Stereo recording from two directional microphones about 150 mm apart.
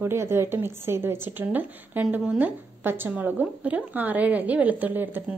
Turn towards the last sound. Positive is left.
turn(degrees=-10)  # may be behind; listen again after turning